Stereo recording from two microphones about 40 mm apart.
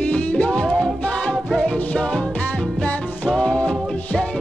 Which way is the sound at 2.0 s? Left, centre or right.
Left.